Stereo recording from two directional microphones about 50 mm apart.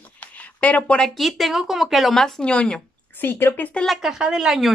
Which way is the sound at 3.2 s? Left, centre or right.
Left.